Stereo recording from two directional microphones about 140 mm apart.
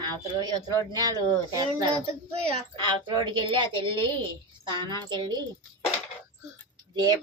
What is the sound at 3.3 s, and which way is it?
A woman's voice, 35° right (ahead or behind).